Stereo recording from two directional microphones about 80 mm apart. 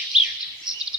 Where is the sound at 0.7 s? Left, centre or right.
Left.